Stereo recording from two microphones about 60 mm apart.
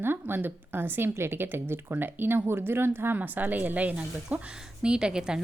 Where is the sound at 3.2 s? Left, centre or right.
Right; by 5.4 s centre.